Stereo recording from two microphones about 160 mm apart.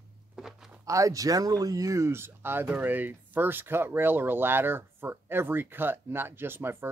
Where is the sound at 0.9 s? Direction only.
20° right (ahead or behind).